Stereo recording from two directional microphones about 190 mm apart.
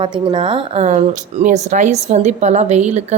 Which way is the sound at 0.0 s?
25° right (ahead or behind).